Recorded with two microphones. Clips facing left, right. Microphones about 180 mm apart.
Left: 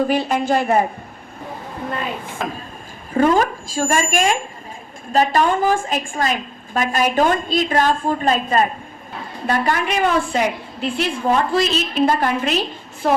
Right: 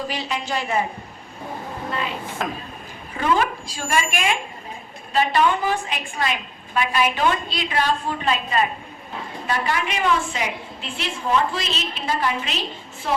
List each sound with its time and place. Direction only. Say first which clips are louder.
0.0 s a woman's voice: left 9 dB; 55° left (ahead or behind)
2.4 s speech: left 1 dB; centre (ahead or behind)
3.2 s a woman's voice: left 6 dB; 40° left (ahead or behind)